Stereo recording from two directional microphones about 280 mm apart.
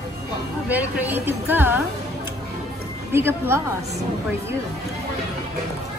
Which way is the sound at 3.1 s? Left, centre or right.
Centre.